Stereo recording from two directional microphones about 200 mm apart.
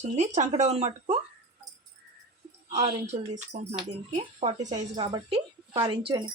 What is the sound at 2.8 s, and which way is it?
Speech, 35° right (ahead or behind).